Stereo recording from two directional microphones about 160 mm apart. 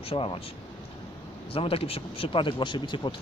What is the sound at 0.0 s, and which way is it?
Speech, 35° left (ahead or behind).